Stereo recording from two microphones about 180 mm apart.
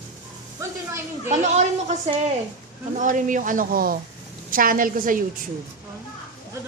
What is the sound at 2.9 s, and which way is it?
Speech, 45° right (ahead or behind).